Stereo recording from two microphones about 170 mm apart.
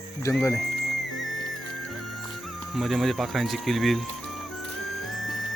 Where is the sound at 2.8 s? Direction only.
Centre (ahead or behind).